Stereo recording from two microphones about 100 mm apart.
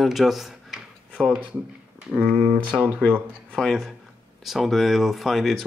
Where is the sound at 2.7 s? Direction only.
15° right (ahead or behind).